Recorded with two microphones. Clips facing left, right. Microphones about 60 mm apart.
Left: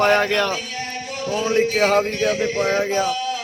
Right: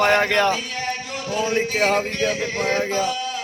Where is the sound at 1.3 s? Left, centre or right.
Centre.